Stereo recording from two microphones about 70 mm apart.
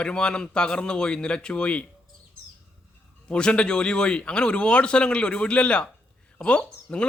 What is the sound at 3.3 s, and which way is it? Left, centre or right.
A man's voice, centre.